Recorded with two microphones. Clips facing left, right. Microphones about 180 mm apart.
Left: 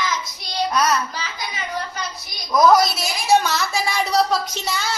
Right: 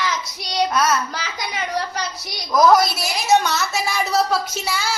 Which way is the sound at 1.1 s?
70° right (ahead or behind).